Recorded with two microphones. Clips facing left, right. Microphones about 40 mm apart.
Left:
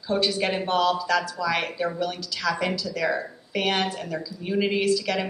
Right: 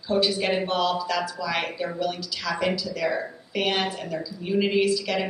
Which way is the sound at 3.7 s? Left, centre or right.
Centre.